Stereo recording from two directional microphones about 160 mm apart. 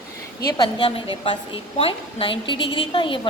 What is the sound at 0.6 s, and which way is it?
A woman's voice, 30° left (ahead or behind).